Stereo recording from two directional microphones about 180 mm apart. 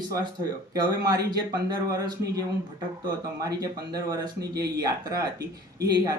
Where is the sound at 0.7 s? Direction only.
20° right (ahead or behind).